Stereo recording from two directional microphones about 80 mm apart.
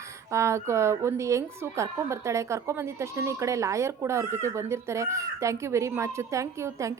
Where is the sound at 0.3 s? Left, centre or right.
Right.